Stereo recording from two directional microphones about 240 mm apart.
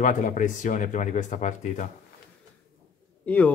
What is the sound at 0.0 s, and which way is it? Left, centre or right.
Speech, left.